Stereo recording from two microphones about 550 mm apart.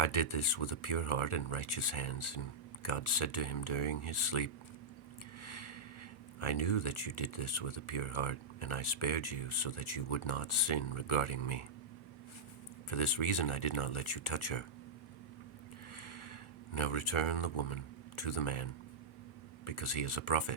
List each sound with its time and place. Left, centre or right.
0.0 s speech: left
5.4 s a sound: left
6.4 s speech: left
12.9 s speech: left
16.0 s a sound: left
18.2 s speech: left